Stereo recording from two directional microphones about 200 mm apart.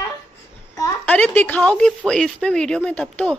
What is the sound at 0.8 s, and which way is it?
A woman's voice, 5° left (ahead or behind).